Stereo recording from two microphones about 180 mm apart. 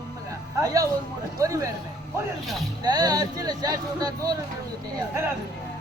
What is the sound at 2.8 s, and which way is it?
Speech, 20° right (ahead or behind).